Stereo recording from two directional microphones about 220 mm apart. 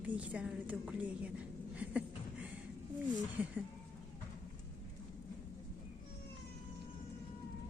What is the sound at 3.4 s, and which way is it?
Speech, 10° right (ahead or behind).